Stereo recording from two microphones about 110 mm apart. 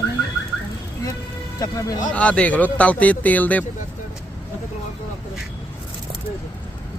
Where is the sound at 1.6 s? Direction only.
35° left (ahead or behind).